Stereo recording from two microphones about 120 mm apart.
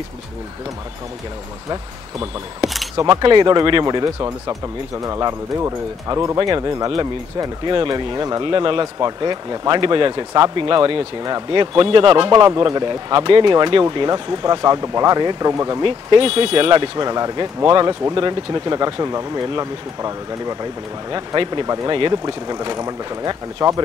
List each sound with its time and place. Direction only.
1.7 s speech: 30° right (ahead or behind)
8.5 s speech: 45° right (ahead or behind)
10.9 s speech: 50° right (ahead or behind); by 15.8 s 30° right (ahead or behind)
15.8 s speech: 45° right (ahead or behind)
17.0 s speech: 35° right (ahead or behind)